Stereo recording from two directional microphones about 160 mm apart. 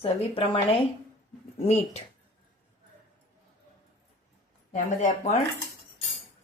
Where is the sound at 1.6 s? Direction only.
40° left (ahead or behind).